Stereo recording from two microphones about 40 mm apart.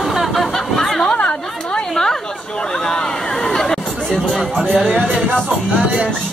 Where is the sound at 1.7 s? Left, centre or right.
Centre.